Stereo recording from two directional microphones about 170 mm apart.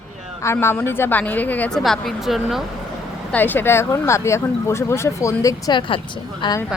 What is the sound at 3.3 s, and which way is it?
A woman's voice, 10° left (ahead or behind).